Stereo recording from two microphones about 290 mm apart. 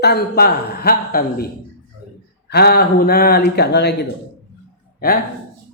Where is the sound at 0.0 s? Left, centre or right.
Left.